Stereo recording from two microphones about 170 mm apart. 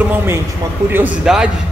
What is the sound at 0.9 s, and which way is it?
Speech, 5° right (ahead or behind).